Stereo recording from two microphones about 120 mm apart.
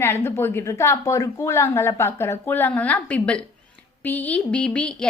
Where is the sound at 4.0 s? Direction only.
15° left (ahead or behind).